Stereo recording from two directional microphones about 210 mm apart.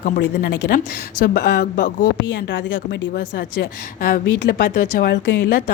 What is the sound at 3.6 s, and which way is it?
A woman's voice, 40° left (ahead or behind).